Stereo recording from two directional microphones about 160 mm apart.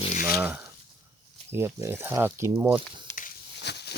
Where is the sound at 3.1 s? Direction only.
75° left (ahead or behind); by 3.9 s 90° left.